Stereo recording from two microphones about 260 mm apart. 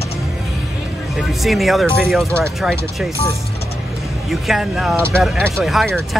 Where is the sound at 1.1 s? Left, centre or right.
Centre.